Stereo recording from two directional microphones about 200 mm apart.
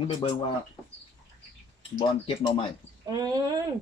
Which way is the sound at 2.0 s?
25° left (ahead or behind).